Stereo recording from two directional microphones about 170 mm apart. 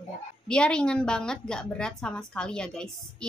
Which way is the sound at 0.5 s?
5° left (ahead or behind).